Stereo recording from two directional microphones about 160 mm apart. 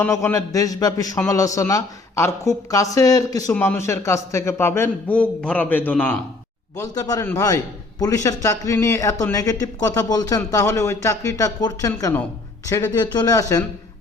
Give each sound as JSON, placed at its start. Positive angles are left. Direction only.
{"t": 0.0, "sound": "a man's voice", "side_deg": 15}
{"t": 6.7, "sound": "a man's voice", "side_deg": 20}